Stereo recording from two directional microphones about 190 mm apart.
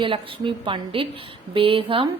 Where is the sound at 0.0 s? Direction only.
25° right (ahead or behind).